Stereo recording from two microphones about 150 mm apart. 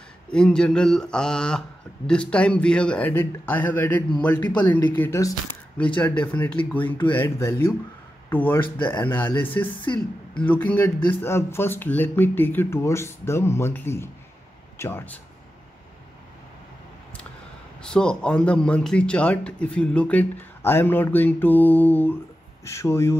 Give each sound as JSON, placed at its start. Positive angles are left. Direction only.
{"t": 0.3, "sound": "speech", "side_deg": 5}
{"t": 17.8, "sound": "speech", "side_deg": 5}